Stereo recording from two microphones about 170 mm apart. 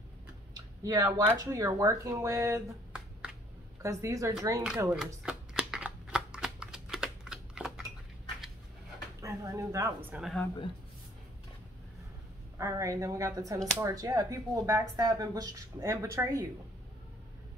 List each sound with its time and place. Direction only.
0.6 s speech: 20° right (ahead or behind)
3.8 s speech: 20° right (ahead or behind)
4.6 s shuffling cards: 5° right (ahead or behind)
9.2 s bird: 20° right (ahead or behind)
10.1 s speech: centre (ahead or behind)
12.5 s speech: 20° right (ahead or behind)